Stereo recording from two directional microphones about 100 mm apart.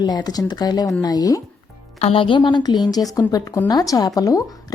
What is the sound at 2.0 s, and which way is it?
A woman's voice, 75° left (ahead or behind).